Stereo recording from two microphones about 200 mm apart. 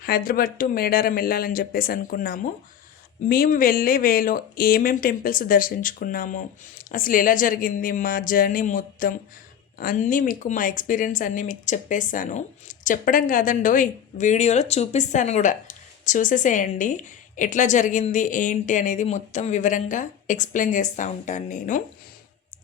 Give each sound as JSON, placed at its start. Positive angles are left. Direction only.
{"t": 0.0, "sound": "speech", "side_deg": 45}